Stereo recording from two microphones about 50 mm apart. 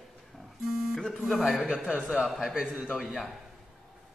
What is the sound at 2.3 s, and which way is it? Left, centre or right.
Speech, centre.